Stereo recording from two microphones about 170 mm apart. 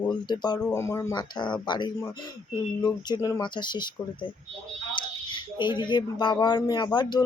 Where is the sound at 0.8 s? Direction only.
15° left (ahead or behind).